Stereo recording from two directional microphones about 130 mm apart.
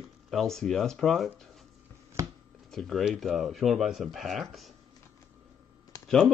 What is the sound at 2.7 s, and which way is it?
Speech, centre (ahead or behind).